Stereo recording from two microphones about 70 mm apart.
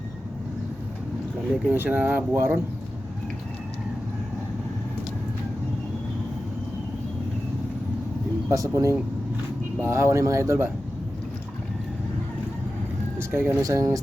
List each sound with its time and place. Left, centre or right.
1.7 s speech: right
8.4 s speech: right
13.1 s police car: right
13.6 s speech: right